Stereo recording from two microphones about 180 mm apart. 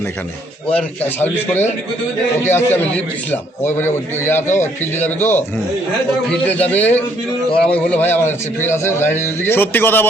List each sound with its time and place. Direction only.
0.7 s a man's voice: 10° left (ahead or behind)